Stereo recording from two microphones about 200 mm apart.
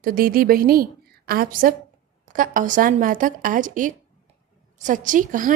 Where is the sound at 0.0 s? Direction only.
45° right (ahead or behind).